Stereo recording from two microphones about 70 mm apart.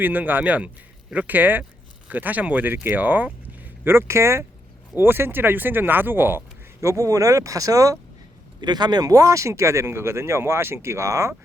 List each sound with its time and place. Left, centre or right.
0.0 s speech: right
6.8 s speech: right
8.6 s speech: right